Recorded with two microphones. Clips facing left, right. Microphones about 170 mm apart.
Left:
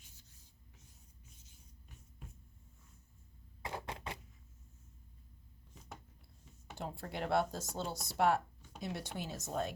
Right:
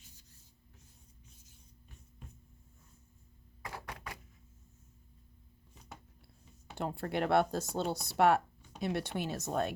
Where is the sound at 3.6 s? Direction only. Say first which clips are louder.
Left 2 dB; 25° left (ahead or behind).